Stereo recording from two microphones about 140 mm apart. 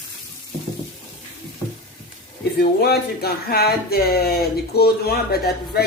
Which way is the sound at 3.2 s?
90° left.